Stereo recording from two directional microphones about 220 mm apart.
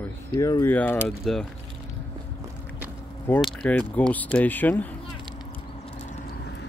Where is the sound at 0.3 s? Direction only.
15° left (ahead or behind).